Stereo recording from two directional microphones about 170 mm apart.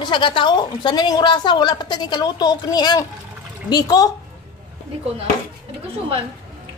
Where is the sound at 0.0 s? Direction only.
30° left (ahead or behind).